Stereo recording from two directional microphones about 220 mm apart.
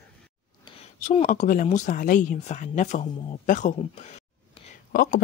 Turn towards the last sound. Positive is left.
turn(degrees=45)  # may be behind; listen again after turning